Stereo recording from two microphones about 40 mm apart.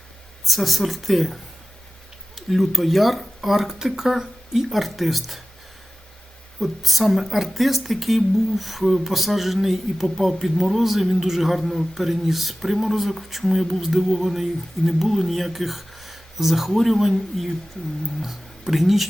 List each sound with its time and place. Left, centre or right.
0.4 s a woman's voice: centre
6.6 s a woman's voice: centre